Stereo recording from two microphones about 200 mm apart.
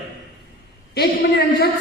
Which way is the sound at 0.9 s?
50° left (ahead or behind).